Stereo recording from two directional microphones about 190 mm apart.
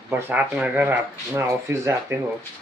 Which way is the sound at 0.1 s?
10° right (ahead or behind).